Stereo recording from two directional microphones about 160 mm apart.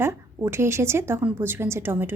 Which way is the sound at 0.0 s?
15° right (ahead or behind).